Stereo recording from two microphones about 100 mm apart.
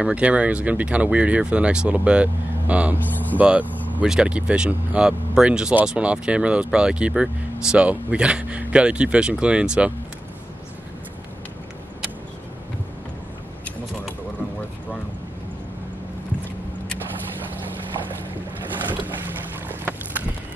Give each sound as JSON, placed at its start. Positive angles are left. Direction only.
{"t": 0.0, "sound": "speech", "side_deg": -15}
{"t": 3.6, "sound": "vehicle", "side_deg": 15}
{"t": 4.0, "sound": "speech", "side_deg": -10}
{"t": 19.8, "sound": "boat", "side_deg": -20}